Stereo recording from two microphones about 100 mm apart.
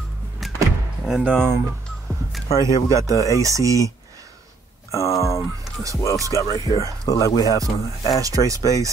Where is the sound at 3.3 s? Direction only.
30° right (ahead or behind).